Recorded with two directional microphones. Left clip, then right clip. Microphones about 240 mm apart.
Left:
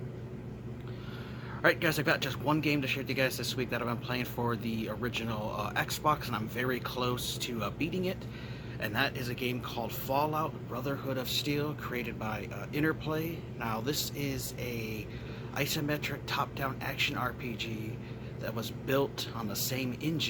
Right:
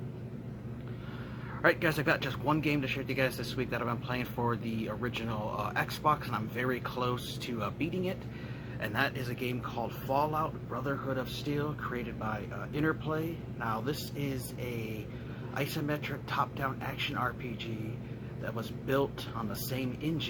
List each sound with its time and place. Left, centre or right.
1.6 s a man's voice: centre